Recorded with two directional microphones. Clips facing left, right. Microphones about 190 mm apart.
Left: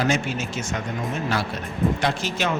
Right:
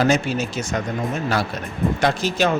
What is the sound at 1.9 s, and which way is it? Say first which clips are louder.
Speech: right 5 dB; 40° right (ahead or behind).